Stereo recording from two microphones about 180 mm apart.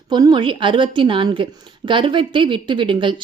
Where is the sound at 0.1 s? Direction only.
20° right (ahead or behind).